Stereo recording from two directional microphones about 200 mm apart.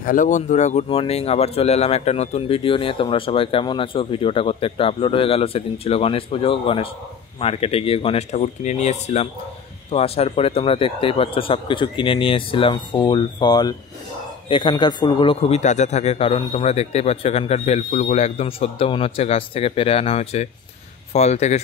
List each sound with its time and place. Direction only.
0.0 s speech: 40° left (ahead or behind)